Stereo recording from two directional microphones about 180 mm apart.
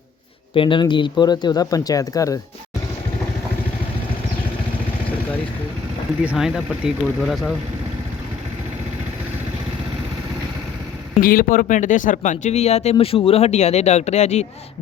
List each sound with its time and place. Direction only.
0.5 s speech: 30° left (ahead or behind)
6.2 s speech: 5° right (ahead or behind)
11.2 s speech: 50° left (ahead or behind)